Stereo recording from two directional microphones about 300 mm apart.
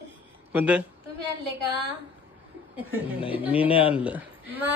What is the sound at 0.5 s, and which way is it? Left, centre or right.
Speech, centre.